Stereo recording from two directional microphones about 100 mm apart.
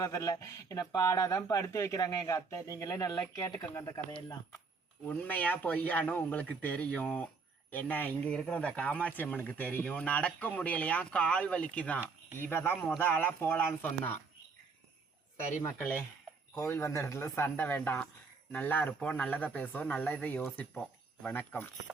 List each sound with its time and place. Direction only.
0.0 s speech: 35° left (ahead or behind)
5.0 s speech: 15° left (ahead or behind)
15.6 s speech: 20° left (ahead or behind)